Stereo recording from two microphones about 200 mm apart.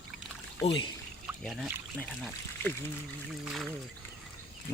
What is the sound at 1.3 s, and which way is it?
Speech, 10° right (ahead or behind).